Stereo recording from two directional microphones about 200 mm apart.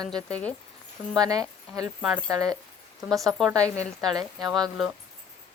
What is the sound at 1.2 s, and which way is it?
Speech, 20° right (ahead or behind).